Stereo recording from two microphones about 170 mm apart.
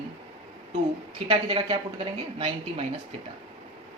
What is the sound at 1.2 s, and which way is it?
A woman's voice, 30° right (ahead or behind).